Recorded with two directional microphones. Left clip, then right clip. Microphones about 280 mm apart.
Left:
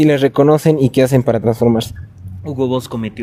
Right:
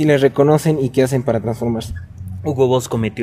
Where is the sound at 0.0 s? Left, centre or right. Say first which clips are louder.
Left 2 dB; left.